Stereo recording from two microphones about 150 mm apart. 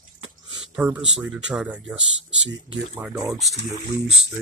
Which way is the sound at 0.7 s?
10° right (ahead or behind).